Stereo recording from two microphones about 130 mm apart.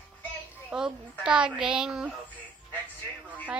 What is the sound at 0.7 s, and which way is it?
A child's voice, 5° right (ahead or behind).